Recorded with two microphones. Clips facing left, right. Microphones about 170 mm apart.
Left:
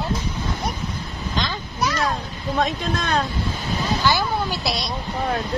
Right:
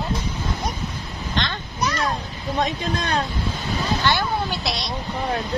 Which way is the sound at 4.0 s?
5° left (ahead or behind).